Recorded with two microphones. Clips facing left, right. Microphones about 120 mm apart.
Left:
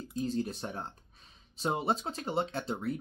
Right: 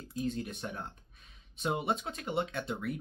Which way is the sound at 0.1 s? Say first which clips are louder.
Left 2 dB; 35° left (ahead or behind).